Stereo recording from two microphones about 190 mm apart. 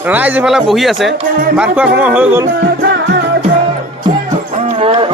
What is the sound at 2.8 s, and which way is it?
Music, 65° right (ahead or behind).